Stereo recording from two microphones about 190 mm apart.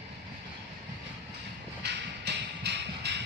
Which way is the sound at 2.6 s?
60° right (ahead or behind).